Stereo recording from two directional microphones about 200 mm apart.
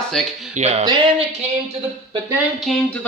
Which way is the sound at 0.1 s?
Centre (ahead or behind).